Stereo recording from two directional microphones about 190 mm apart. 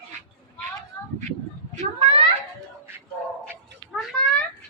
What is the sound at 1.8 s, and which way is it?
Children playing, 30° right (ahead or behind).